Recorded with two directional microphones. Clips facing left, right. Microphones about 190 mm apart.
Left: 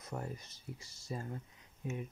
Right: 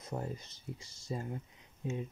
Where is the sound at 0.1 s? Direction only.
25° right (ahead or behind).